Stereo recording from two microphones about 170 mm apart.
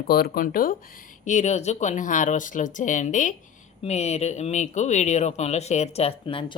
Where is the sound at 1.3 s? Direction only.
45° left (ahead or behind).